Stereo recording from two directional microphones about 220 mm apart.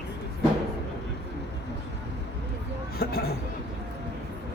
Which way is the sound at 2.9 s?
45° left (ahead or behind).